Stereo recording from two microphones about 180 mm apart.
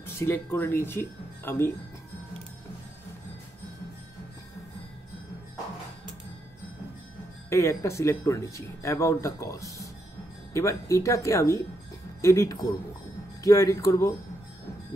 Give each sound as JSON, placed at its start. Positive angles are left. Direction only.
{"t": 0.0, "sound": "speech", "side_deg": 15}
{"t": 7.4, "sound": "speech", "side_deg": 15}